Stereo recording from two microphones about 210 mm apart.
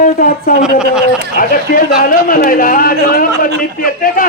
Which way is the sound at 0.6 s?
5° right (ahead or behind).